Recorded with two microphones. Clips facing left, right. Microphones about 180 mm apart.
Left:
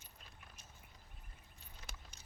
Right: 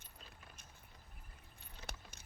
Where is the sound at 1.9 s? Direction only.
65° right (ahead or behind).